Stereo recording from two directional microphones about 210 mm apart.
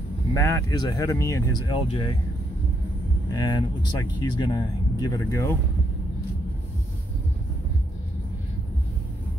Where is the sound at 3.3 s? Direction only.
20° left (ahead or behind).